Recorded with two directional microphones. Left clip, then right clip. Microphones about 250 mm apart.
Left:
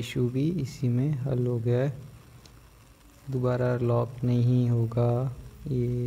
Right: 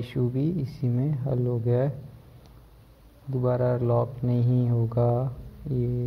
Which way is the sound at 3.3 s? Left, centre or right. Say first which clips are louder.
Right 2 dB; centre.